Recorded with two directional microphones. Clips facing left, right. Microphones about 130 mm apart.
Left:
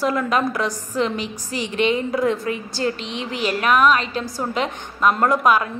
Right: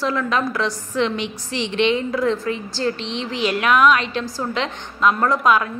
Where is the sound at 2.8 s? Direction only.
10° left (ahead or behind).